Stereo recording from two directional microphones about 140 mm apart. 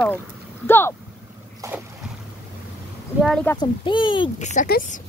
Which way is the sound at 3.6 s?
35° left (ahead or behind).